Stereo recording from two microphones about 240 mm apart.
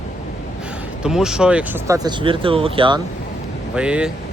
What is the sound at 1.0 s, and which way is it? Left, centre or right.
Speech, centre.